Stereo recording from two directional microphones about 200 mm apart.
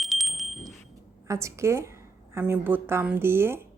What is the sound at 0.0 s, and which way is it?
Wind chime, centre (ahead or behind).